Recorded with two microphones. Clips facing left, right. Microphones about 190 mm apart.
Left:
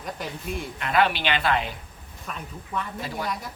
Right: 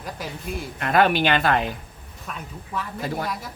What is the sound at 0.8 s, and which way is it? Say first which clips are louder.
Speech: right 4 dB; 50° right (ahead or behind).